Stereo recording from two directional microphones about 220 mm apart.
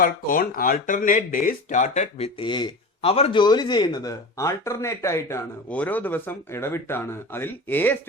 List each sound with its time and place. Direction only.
0.0 s speech: 40° left (ahead or behind); by 7.9 s 10° left (ahead or behind)